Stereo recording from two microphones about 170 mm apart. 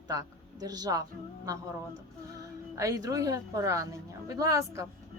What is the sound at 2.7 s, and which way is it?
A woman's voice, 20° right (ahead or behind).